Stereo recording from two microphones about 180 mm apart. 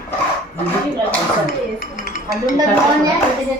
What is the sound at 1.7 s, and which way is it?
Dishes, 50° left (ahead or behind).